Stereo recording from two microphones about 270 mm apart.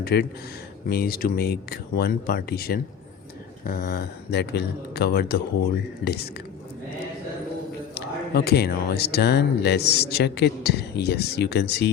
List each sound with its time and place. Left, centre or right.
0.0 s speech: left
7.9 s speech: left